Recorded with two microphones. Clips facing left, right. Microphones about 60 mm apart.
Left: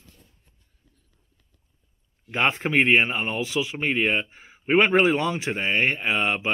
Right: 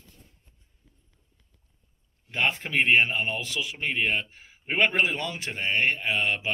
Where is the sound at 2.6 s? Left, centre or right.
Left.